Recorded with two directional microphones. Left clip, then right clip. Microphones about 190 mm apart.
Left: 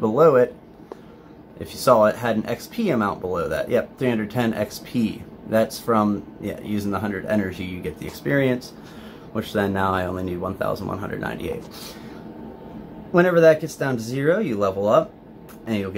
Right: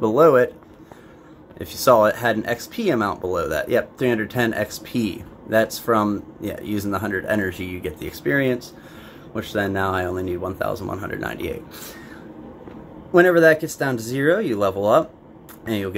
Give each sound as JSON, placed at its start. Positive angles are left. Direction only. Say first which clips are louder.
{"t": 0.0, "sound": "speech", "louder": "right 1 dB", "side_deg": -15}
{"t": 1.6, "sound": "speech", "louder": "right 1 dB", "side_deg": -15}
{"t": 13.1, "sound": "speech", "louder": "right 1 dB", "side_deg": -15}